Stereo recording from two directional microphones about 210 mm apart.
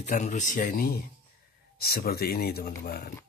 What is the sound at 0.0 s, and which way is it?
Speech, 35° left (ahead or behind).